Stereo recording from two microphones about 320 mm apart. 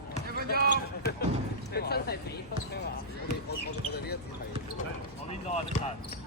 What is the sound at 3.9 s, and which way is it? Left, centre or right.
Speech, left.